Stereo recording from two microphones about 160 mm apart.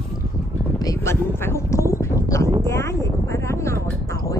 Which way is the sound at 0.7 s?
20° left (ahead or behind).